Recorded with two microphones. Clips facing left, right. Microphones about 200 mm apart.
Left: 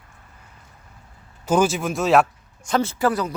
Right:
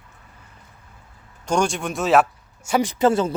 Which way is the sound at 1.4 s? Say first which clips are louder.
Left 2 dB; 5° left (ahead or behind).